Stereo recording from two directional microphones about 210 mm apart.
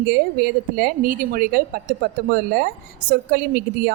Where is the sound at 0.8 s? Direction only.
40° right (ahead or behind).